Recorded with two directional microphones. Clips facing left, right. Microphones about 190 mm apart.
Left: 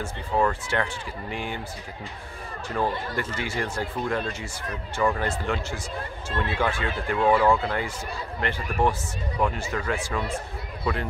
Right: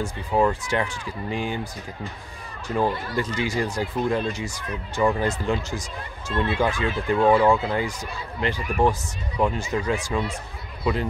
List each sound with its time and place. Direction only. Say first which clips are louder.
0.0 s speech: right 3 dB; 15° right (ahead or behind)
2.7 s speech: right 3 dB; 15° right (ahead or behind)